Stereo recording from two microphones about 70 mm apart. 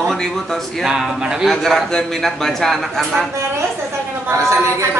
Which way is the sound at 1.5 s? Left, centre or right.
Centre.